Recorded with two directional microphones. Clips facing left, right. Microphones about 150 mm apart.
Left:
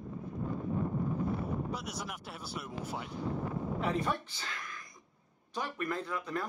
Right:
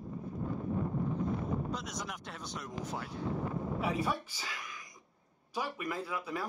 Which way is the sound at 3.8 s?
10° right (ahead or behind).